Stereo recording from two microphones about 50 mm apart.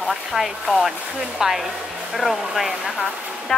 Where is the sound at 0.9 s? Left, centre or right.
Centre.